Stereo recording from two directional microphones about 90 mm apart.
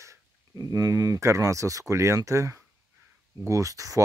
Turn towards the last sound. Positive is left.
turn(degrees=-40)  # may be behind; listen again after turning